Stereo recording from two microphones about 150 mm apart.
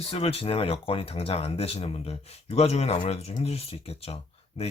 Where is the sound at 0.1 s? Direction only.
40° left (ahead or behind).